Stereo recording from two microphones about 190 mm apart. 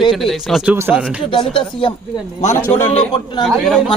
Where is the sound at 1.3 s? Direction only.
25° left (ahead or behind).